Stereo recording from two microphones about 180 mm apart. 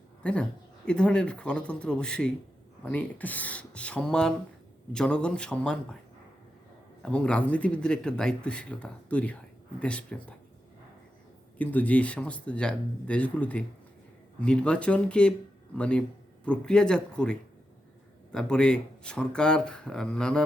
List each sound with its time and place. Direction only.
0.2 s a woman's voice: 5° left (ahead or behind)
7.0 s speech: 5° left (ahead or behind)
11.5 s speech: 10° left (ahead or behind)